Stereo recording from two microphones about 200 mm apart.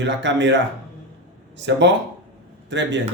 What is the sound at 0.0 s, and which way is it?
Speech, 65° right (ahead or behind).